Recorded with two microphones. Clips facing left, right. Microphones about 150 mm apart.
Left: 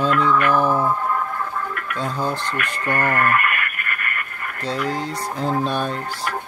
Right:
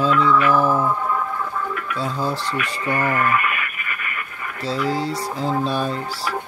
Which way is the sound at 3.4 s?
55° left (ahead or behind).